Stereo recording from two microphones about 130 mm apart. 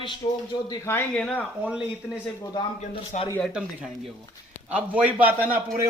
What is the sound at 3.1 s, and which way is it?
Speech, 65° left (ahead or behind).